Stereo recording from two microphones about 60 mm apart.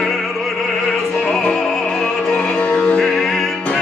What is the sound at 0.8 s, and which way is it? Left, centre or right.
Opera, centre.